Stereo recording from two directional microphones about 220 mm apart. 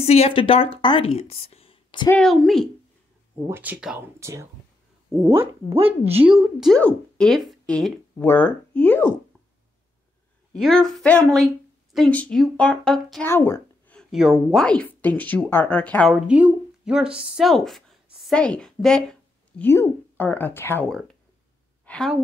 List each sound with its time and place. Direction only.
0.0 s speech: 30° left (ahead or behind)
2.0 s a woman's voice: 5° left (ahead or behind); by 4.5 s 10° right (ahead or behind)
6.1 s a woman's voice: 5° right (ahead or behind)
10.5 s a woman's voice: centre (ahead or behind)